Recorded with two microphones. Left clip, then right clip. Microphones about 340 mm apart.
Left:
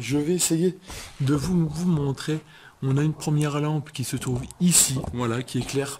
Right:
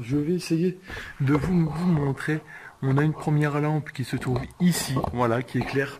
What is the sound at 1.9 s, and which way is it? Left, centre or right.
Speech, centre.